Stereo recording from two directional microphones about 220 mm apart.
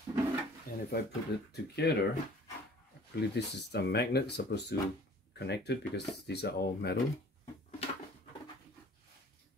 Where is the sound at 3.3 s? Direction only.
50° left (ahead or behind).